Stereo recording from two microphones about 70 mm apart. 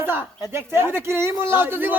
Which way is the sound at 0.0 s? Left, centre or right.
Right.